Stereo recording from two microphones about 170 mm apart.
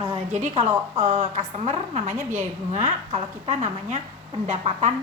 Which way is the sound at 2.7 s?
45° right (ahead or behind).